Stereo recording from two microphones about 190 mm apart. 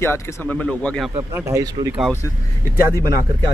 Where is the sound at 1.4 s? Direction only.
15° right (ahead or behind).